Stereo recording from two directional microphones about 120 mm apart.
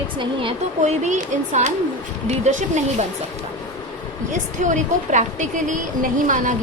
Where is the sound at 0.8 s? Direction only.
75° right (ahead or behind); by 1.7 s 90° right.